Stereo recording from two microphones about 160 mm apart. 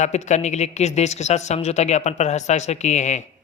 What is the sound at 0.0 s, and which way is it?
Speech, 45° left (ahead or behind).